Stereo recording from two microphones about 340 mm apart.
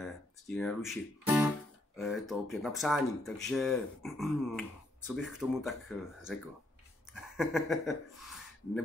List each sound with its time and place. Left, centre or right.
0.0 s guitar: centre
2.0 s speech: centre